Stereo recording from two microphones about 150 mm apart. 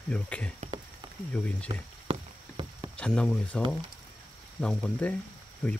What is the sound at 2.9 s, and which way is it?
Speech, 5° left (ahead or behind).